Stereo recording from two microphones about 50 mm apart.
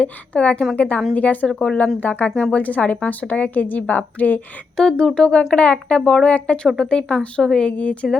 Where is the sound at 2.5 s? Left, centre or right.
Left.